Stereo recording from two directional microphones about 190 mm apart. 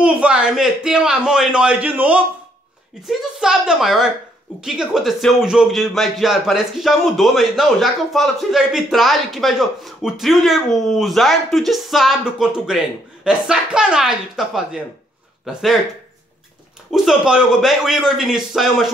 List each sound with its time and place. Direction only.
0.0 s speech: 5° right (ahead or behind)
16.9 s speech: centre (ahead or behind)